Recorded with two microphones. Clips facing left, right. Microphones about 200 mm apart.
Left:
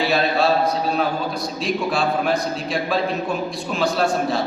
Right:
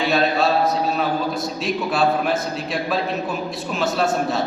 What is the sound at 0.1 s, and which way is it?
A man's voice, centre (ahead or behind).